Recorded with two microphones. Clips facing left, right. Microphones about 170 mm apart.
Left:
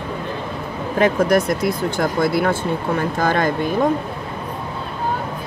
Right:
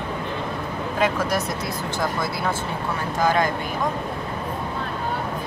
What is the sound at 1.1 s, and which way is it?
Speech, 55° left (ahead or behind).